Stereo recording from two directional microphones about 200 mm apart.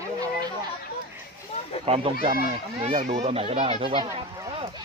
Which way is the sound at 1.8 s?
30° right (ahead or behind).